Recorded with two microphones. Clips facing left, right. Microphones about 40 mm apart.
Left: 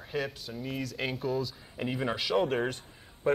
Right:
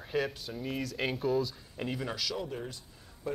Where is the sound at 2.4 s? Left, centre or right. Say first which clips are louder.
Left 10 dB; left.